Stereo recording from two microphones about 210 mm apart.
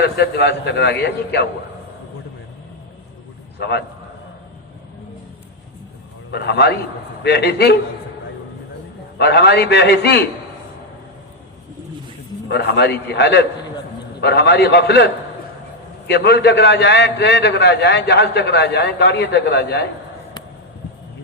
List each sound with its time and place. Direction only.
0.0 s a man's voice: 50° left (ahead or behind)
3.6 s a man's voice: 50° left (ahead or behind)
6.3 s a man's voice: 50° left (ahead or behind)
9.1 s a man's voice: 50° left (ahead or behind)
12.5 s a man's voice: 50° left (ahead or behind)
16.0 s a man's voice: 50° left (ahead or behind)